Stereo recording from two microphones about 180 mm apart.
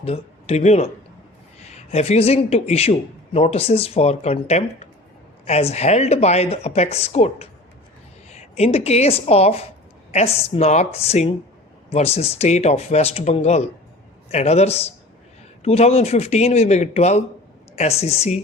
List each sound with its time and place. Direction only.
0.0 s a man's voice: 35° left (ahead or behind)